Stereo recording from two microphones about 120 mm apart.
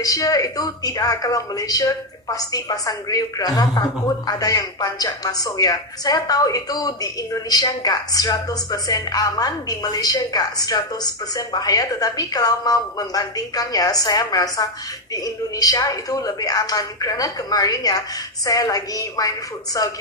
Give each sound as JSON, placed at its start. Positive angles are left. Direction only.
{"t": 0.0, "sound": "a woman's voice", "side_deg": 30}